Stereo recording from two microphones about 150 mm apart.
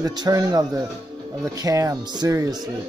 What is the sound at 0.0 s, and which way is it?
Speech, 25° right (ahead or behind).